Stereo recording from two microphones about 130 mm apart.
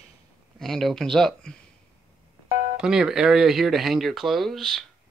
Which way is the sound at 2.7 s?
5° right (ahead or behind).